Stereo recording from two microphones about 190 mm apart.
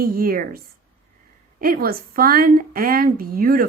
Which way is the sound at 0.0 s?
50° right (ahead or behind).